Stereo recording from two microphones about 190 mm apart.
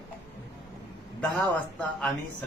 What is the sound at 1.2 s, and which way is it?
Speech, 5° left (ahead or behind).